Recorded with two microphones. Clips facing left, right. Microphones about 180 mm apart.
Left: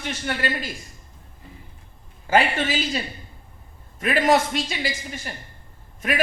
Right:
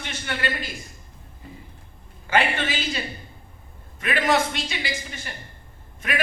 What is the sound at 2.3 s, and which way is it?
Speech, 40° left (ahead or behind).